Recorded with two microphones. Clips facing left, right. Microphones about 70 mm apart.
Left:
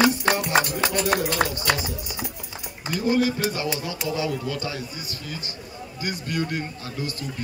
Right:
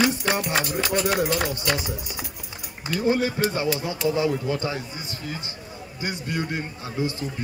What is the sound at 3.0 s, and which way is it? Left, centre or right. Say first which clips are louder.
Speech: even; right.